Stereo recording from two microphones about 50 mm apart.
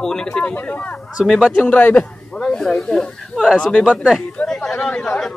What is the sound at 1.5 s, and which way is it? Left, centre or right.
Speech, left.